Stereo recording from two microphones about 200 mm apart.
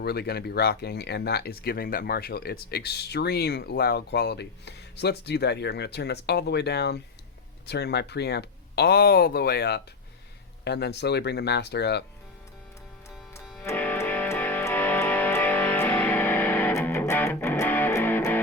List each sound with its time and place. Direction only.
0.0 s speech: 55° left (ahead or behind)
13.4 s music: centre (ahead or behind)